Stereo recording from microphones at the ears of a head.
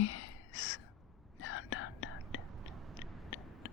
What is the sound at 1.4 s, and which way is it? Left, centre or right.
Whispering, left.